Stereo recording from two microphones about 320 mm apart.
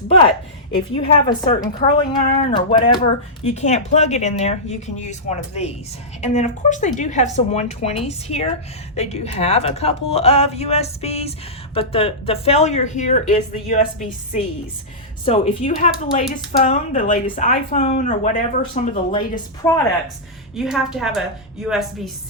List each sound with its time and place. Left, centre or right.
0.1 s a woman's voice: centre
15.2 s speech: left
20.6 s a woman's voice: centre